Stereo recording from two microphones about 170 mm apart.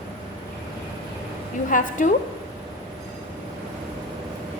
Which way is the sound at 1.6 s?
50° left (ahead or behind).